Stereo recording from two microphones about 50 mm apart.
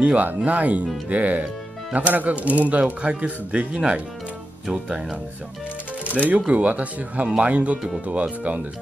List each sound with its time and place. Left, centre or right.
0.0 s speech: right
6.1 s speech: right